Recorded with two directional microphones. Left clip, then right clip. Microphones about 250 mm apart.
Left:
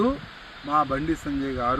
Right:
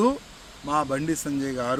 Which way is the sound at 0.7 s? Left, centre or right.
Right.